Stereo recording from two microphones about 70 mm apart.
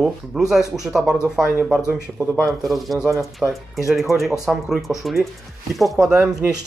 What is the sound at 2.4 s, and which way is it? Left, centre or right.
Speech, centre.